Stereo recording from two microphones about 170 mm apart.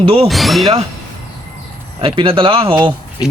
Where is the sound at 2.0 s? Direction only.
35° right (ahead or behind).